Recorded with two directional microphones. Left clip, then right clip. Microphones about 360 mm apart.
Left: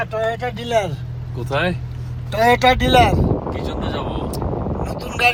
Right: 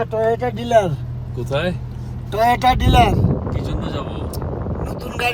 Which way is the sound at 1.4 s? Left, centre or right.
Centre.